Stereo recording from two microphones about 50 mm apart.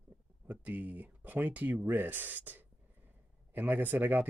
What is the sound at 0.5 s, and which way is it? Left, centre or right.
Speech, right.